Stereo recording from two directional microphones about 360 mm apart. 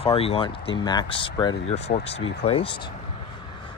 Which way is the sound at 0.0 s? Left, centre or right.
Centre.